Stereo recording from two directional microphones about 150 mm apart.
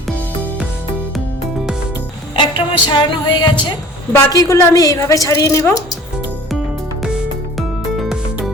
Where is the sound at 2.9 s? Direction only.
30° left (ahead or behind).